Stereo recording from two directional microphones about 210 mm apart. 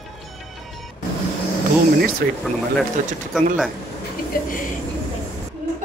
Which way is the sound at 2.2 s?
50° right (ahead or behind).